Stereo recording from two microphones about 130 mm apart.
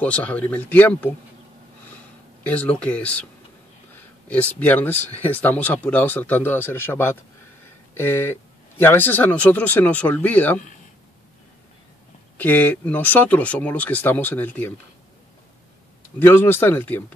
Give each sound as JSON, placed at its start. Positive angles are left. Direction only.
{"t": 0.0, "sound": "speech", "side_deg": 10}
{"t": 2.4, "sound": "speech", "side_deg": 10}
{"t": 12.4, "sound": "speech", "side_deg": 15}
{"t": 16.2, "sound": "speech", "side_deg": 15}